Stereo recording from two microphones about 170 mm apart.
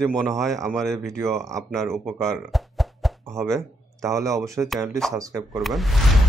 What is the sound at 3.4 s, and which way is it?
Speech, 20° right (ahead or behind).